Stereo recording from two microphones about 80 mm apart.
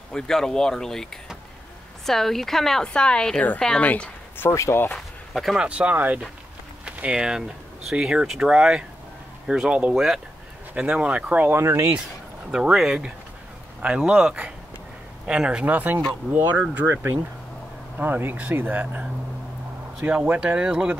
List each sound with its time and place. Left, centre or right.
0.1 s a woman's voice: centre
4.5 s speech: left
4.9 s a sound: centre
5.7 s speech: centre
11.5 s speech: right
12.4 s speech: centre; by 16.0 s right
16.3 s speech: centre
16.8 s speech: right
17.9 s speech: right
20.0 s speech: centre